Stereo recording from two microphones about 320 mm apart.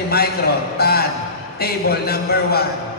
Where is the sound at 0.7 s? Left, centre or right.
Left.